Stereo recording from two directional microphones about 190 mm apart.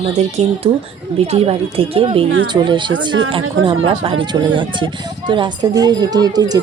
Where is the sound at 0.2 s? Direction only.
35° right (ahead or behind).